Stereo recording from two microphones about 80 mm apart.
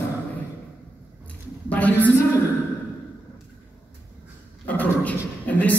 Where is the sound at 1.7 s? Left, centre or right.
Centre.